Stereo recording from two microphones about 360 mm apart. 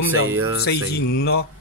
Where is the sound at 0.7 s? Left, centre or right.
Left.